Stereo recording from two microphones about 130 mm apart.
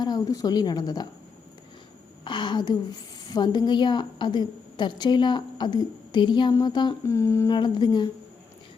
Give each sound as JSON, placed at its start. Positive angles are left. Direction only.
{"t": 0.0, "sound": "speech", "side_deg": 30}
{"t": 2.2, "sound": "a woman's voice", "side_deg": 35}
{"t": 7.1, "sound": "humming", "side_deg": 20}
{"t": 7.5, "sound": "a woman's voice", "side_deg": 35}